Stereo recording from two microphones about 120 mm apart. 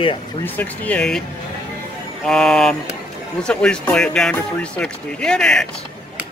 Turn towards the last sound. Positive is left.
turn(degrees=5)  # may be behind; listen again after turning